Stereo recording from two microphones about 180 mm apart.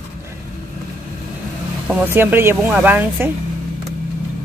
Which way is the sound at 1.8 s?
10° right (ahead or behind).